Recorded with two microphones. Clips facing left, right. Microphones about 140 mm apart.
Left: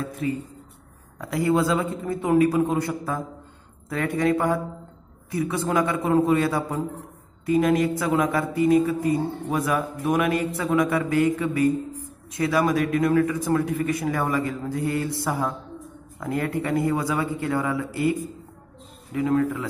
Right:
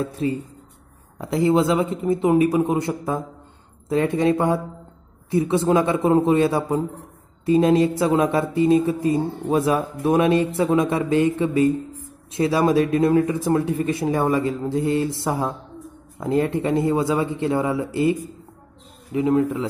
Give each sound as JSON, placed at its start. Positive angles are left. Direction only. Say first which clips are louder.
{"t": 0.0, "sound": "speech", "louder": "right 4 dB", "side_deg": -30}
{"t": 19.1, "sound": "speech", "louder": "right 3 dB", "side_deg": -20}